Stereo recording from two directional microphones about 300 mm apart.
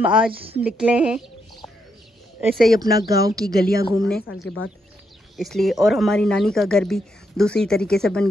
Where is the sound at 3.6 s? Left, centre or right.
Left.